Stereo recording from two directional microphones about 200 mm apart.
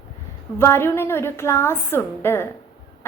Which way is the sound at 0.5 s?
10° left (ahead or behind).